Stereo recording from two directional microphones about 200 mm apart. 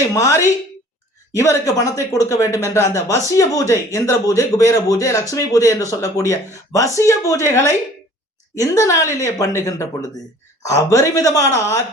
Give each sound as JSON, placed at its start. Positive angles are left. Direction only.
{"t": 0.1, "sound": "speech", "side_deg": 15}